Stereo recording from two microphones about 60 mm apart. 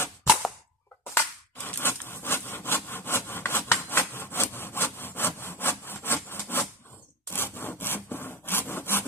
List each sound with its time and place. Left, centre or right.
1.1 s a sound: left
4.5 s wood: left
7.3 s rub: left
7.7 s sawing: left